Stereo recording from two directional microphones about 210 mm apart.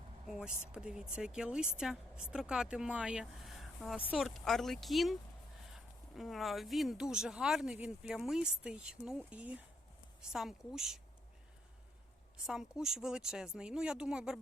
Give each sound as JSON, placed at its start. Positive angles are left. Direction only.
{"t": 0.3, "sound": "speech", "side_deg": -5}
{"t": 12.5, "sound": "speech", "side_deg": -5}